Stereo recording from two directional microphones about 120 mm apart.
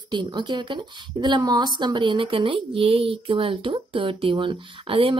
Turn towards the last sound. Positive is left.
turn(degrees=-45)  # may be behind; listen again after turning